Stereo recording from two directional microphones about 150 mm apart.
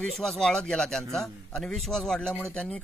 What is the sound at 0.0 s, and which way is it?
A man's voice, 5° left (ahead or behind).